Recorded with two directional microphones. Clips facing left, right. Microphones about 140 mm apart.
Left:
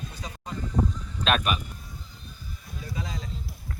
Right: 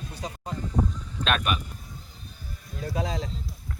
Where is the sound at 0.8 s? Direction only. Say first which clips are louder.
Left 1 dB; 5° right (ahead or behind).